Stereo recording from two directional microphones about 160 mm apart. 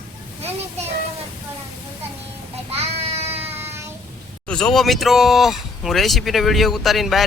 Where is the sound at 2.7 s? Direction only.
40° right (ahead or behind).